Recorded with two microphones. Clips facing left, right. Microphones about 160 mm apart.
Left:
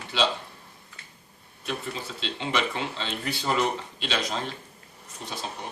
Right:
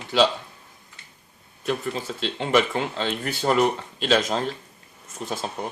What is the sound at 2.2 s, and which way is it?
Speech, 45° right (ahead or behind).